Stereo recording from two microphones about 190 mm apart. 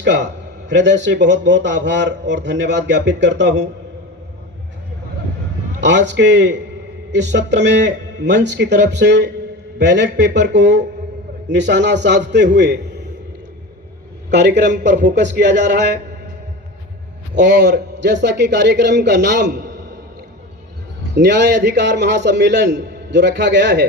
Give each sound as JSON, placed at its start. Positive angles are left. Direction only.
{"t": 0.0, "sound": "a man's voice", "side_deg": -65}
{"t": 5.8, "sound": "a man's voice", "side_deg": -70}
{"t": 14.3, "sound": "a man's voice", "side_deg": -65}
{"t": 17.6, "sound": "a man's voice", "side_deg": -65}
{"t": 21.2, "sound": "a man's voice", "side_deg": -65}